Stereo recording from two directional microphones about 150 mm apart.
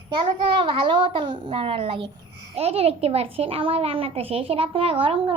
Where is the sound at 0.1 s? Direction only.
35° right (ahead or behind).